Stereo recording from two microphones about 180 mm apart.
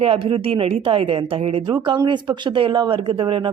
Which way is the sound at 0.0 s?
30° right (ahead or behind).